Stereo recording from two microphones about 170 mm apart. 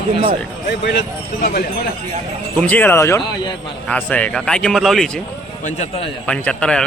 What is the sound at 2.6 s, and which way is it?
Speech, 10° left (ahead or behind).